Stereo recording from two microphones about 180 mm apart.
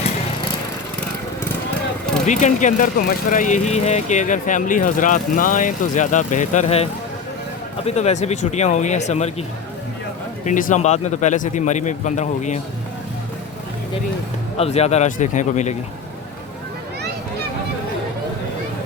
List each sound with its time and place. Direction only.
2.2 s speech: 40° left (ahead or behind)
7.9 s a man's voice: 35° left (ahead or behind)
10.4 s a man's voice: 45° left (ahead or behind)
14.6 s a man's voice: 35° left (ahead or behind)